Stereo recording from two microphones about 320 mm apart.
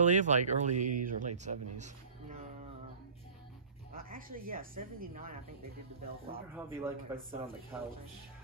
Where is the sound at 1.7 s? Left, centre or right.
Right.